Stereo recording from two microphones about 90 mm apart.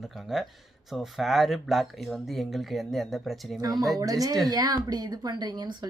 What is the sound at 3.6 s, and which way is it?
A woman's voice, 45° right (ahead or behind).